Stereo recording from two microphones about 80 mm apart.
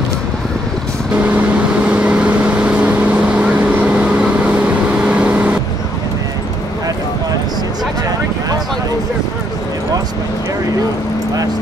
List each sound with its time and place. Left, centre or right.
1.9 s vehicle: centre